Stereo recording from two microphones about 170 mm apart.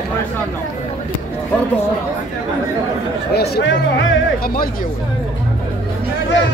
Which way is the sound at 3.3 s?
70° left (ahead or behind).